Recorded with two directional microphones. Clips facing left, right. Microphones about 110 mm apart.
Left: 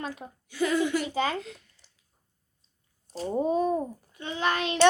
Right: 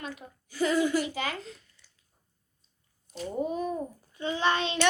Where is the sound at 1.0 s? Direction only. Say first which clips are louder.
Left 5 dB; 30° left (ahead or behind).